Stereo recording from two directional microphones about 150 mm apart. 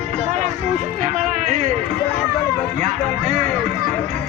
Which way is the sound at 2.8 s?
50° right (ahead or behind).